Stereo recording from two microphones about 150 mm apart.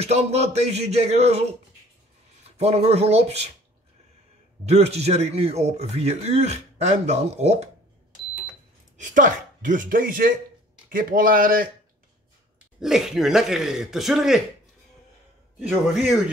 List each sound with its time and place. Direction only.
0.0 s speech: 45° right (ahead or behind)
2.5 s speech: 45° right (ahead or behind)
4.6 s speech: 45° right (ahead or behind)
8.9 s speech: 55° right (ahead or behind)
12.8 s speech: 5° right (ahead or behind)
15.6 s a man's voice: 10° right (ahead or behind)